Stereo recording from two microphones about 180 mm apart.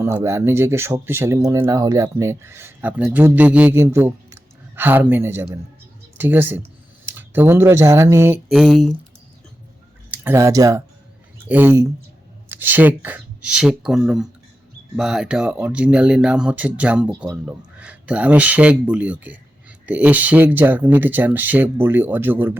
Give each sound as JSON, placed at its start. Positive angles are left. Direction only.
{"t": 0.0, "sound": "speech", "side_deg": -15}
{"t": 8.4, "sound": "speech", "side_deg": 0}
{"t": 10.1, "sound": "speech", "side_deg": -15}